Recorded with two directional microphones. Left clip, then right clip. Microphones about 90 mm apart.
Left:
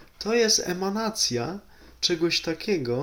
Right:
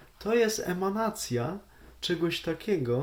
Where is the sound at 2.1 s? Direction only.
25° right (ahead or behind).